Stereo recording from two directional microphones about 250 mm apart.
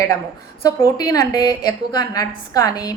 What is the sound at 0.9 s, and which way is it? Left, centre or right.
A woman's voice, centre.